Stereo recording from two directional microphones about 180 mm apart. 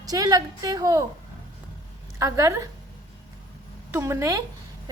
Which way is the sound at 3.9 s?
15° right (ahead or behind).